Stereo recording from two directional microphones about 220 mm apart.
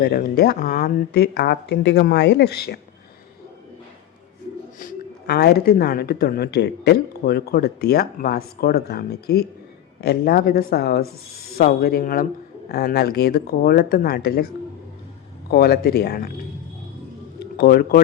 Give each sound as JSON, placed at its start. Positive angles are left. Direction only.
{"t": 0.0, "sound": "speech", "side_deg": 40}
{"t": 4.8, "sound": "speech", "side_deg": 45}
{"t": 17.4, "sound": "speech", "side_deg": 45}